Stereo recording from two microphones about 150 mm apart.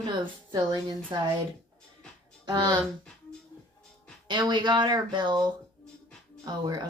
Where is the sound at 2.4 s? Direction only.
30° right (ahead or behind).